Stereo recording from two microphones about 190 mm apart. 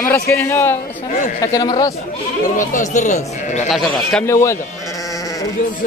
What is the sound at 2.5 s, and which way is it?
Speech, 40° left (ahead or behind).